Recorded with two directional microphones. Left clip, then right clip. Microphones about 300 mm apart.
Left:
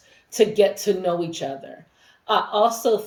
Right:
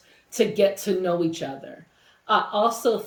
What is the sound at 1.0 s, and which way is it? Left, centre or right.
A woman's voice, centre.